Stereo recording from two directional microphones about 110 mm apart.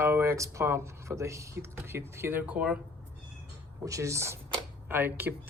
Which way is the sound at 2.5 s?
10° right (ahead or behind).